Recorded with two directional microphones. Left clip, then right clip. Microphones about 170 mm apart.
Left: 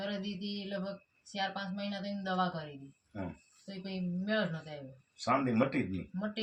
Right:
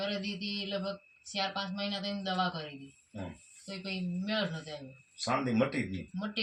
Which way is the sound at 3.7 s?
15° left (ahead or behind).